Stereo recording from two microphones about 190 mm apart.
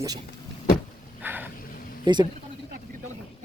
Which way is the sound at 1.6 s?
50° left (ahead or behind).